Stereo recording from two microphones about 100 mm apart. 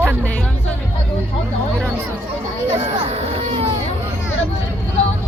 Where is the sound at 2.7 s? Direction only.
90° right.